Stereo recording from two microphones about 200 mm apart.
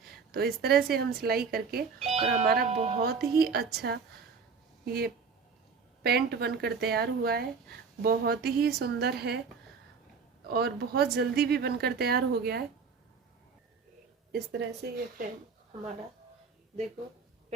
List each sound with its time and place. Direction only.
0.3 s speech: 50° right (ahead or behind)
2.0 s speech: 35° right (ahead or behind)
3.0 s speech: 50° right (ahead or behind)
10.5 s speech: 50° right (ahead or behind)
14.3 s speech: 60° right (ahead or behind)